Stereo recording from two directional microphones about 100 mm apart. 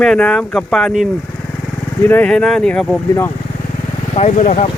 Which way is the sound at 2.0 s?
20° left (ahead or behind).